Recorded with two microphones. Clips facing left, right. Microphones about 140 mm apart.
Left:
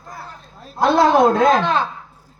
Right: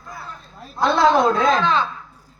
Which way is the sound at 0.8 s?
50° left (ahead or behind).